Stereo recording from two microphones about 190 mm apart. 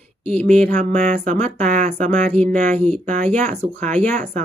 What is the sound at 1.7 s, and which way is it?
Speech, 40° right (ahead or behind).